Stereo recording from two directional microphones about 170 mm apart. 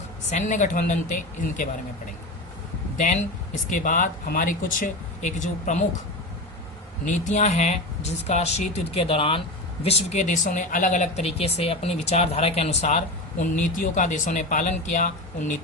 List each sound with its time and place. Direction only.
0.3 s speech: 45° left (ahead or behind)
3.0 s speech: 45° left (ahead or behind)
7.0 s speech: 45° left (ahead or behind)